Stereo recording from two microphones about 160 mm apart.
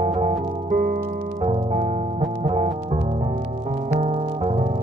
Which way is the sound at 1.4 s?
45° right (ahead or behind).